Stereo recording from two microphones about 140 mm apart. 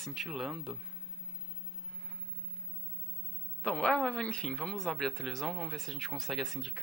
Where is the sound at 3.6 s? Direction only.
5° left (ahead or behind).